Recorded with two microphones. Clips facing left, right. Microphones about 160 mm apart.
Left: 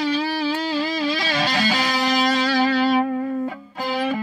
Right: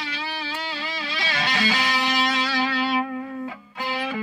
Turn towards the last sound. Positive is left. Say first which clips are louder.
# left 6 dB
turn(degrees=35)  # may be behind; listen again after turning